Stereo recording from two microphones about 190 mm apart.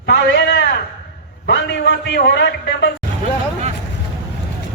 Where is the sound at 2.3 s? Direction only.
70° left (ahead or behind).